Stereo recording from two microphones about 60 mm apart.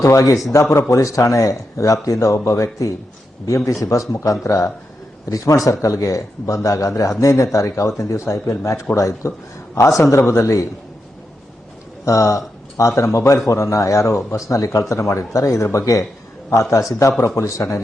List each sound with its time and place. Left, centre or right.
0.0 s a man's voice: left
0.5 s a man's voice: left
2.1 s a man's voice: left
12.0 s a man's voice: left